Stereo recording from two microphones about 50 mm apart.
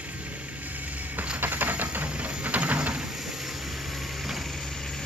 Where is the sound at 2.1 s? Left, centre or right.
Right.